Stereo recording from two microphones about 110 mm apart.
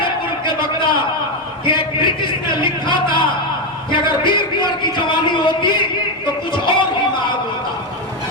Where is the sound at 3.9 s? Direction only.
45° left (ahead or behind).